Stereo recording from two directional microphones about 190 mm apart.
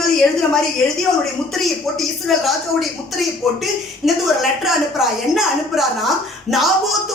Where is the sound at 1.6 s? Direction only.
Centre (ahead or behind).